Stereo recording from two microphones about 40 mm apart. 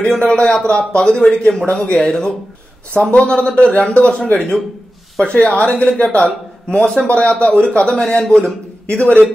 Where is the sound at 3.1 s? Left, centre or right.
Left.